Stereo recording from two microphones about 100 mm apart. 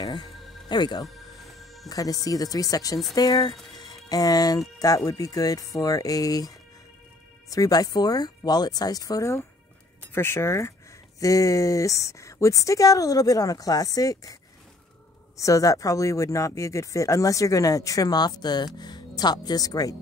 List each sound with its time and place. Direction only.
0.0 s music: 45° left (ahead or behind)
1.9 s speech: 35° left (ahead or behind)
15.3 s speech: 35° left (ahead or behind)